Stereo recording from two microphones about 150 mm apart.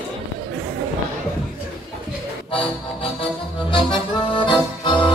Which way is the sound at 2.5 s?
40° left (ahead or behind).